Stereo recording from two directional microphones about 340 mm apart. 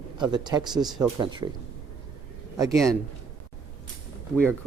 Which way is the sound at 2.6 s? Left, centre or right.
Centre.